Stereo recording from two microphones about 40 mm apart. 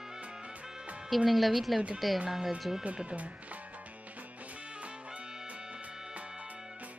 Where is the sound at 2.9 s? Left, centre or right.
Right.